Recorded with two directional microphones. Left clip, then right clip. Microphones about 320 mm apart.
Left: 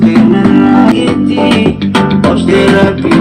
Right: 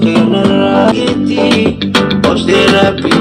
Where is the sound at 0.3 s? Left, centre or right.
Right.